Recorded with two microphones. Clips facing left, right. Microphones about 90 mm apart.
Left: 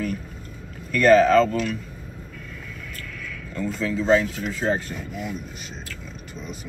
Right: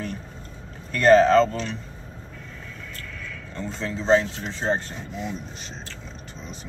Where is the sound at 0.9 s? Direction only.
35° right (ahead or behind).